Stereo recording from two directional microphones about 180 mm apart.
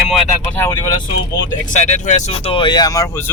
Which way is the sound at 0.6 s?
20° left (ahead or behind).